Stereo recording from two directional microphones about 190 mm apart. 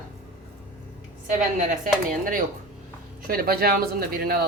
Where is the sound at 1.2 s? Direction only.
45° right (ahead or behind).